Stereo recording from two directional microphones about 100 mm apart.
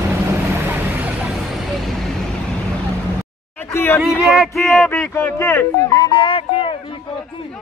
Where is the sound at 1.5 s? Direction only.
Centre (ahead or behind).